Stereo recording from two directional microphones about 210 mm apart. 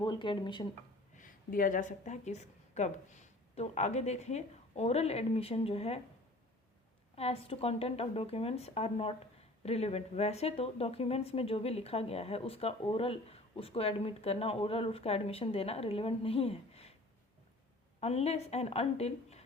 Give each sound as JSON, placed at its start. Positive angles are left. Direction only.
{"t": 0.0, "sound": "speech", "side_deg": 20}
{"t": 1.1, "sound": "a woman's voice", "side_deg": 40}
{"t": 7.2, "sound": "speech", "side_deg": 30}
{"t": 18.0, "sound": "speech", "side_deg": 30}